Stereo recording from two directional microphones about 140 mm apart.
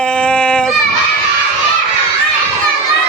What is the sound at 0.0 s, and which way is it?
Baby cry, 5° left (ahead or behind).